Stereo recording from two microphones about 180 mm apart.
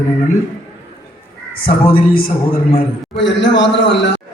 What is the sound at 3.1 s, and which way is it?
Speech, 85° left.